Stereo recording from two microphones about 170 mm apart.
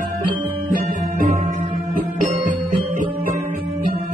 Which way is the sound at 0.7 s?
55° right (ahead or behind).